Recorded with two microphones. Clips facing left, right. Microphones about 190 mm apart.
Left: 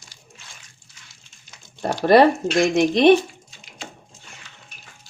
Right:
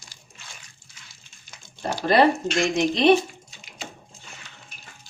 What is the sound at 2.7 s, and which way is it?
Speech, 60° left (ahead or behind).